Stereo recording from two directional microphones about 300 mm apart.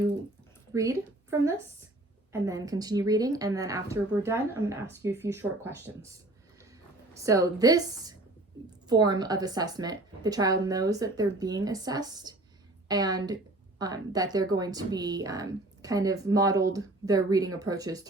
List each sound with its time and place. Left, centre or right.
0.7 s a woman's voice: centre
7.3 s a woman's voice: centre